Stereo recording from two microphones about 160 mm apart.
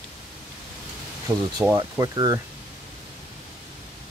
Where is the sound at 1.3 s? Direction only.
20° right (ahead or behind).